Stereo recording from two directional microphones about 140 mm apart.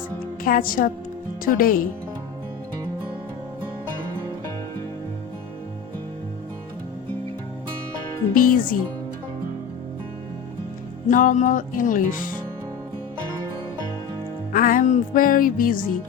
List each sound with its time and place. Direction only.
0.4 s a woman's voice: 90° left
1.5 s music: 85° left
8.4 s music: 85° left
11.1 s music: 70° left (ahead or behind)
14.5 s music: 75° left (ahead or behind)